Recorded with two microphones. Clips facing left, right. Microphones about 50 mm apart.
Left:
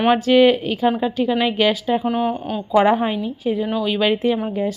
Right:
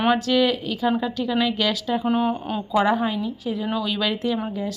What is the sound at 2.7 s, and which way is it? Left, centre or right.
Speech, left.